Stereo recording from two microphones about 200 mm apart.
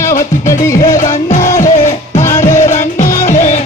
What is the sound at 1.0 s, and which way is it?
Music, 40° left (ahead or behind).